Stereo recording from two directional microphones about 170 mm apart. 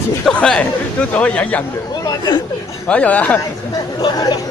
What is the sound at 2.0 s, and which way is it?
Chatter, 20° left (ahead or behind).